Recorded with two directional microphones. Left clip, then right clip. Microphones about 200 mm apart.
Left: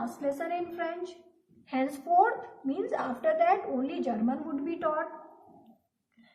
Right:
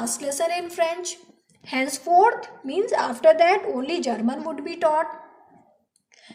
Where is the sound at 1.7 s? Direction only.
25° right (ahead or behind).